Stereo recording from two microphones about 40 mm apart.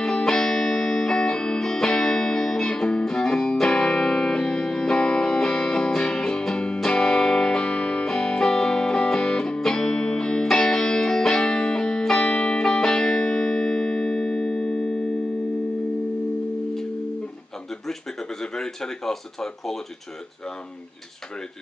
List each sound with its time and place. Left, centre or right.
0.0 s music: centre
12.2 s music: left
12.6 s music: centre
18.4 s a sound: centre